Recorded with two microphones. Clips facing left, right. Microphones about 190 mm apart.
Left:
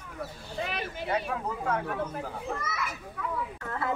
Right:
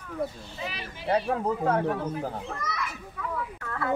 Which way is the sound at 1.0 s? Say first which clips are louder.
Right 7 dB; 35° right (ahead or behind).